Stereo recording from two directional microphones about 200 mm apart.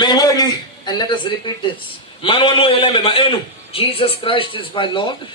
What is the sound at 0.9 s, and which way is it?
A man's voice, 20° left (ahead or behind).